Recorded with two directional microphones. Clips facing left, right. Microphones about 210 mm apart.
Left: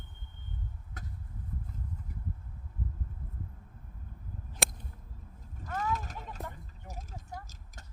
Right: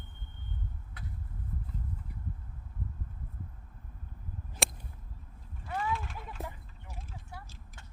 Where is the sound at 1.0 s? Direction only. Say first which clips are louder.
Even; 45° left (ahead or behind).